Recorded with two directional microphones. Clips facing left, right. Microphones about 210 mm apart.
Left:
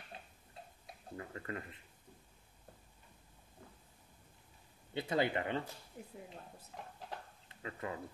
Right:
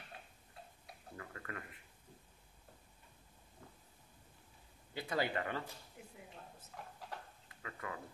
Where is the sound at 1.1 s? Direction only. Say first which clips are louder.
Left 5 dB; 25° left (ahead or behind).